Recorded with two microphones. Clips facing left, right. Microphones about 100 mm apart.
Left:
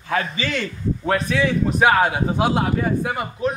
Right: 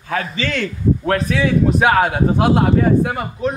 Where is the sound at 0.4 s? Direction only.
5° left (ahead or behind).